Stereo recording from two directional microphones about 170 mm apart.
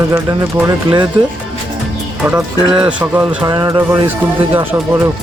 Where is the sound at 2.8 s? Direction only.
10° right (ahead or behind).